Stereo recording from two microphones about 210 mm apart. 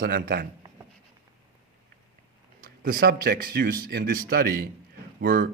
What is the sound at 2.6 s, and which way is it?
A man's voice, 40° right (ahead or behind).